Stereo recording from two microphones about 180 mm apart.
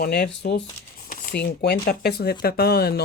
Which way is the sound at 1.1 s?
60° left (ahead or behind).